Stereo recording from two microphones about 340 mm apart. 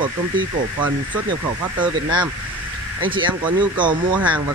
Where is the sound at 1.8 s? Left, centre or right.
Centre.